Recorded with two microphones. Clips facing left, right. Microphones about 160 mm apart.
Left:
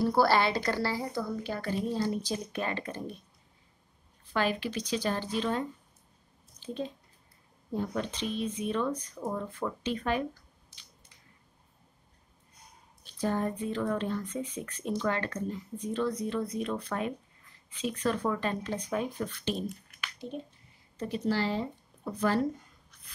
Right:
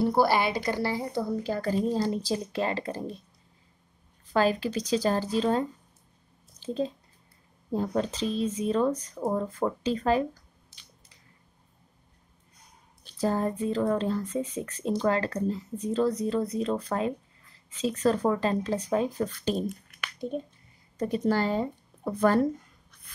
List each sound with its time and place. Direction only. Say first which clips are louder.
0.0 s a woman's voice: right 1 dB; 20° right (ahead or behind)
1.2 s speech: right 5 dB; 35° right (ahead or behind)
4.3 s speech: right 5 dB; 40° right (ahead or behind)
7.7 s speech: right 5 dB; 35° right (ahead or behind)
13.2 s speech: right 4 dB; 35° right (ahead or behind)
21.0 s a woman's voice: right 4 dB; 50° right (ahead or behind)